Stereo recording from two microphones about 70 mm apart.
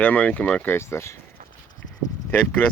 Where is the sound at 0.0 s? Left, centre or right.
Left.